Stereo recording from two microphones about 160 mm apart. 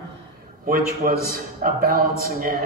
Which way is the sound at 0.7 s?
65° right (ahead or behind).